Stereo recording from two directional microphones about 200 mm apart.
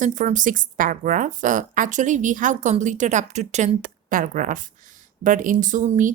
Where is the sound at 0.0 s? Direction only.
40° right (ahead or behind).